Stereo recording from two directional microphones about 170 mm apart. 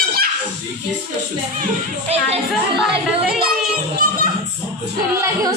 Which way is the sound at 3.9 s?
55° right (ahead or behind).